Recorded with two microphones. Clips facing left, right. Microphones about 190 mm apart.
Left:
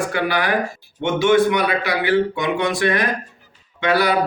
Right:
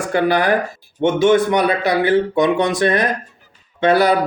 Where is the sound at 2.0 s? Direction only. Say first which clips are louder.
Right 3 dB; 45° right (ahead or behind).